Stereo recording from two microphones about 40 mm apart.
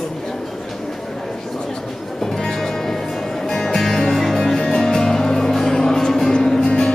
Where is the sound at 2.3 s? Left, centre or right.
Centre.